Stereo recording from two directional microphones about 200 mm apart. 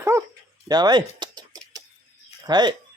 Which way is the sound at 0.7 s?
20° right (ahead or behind).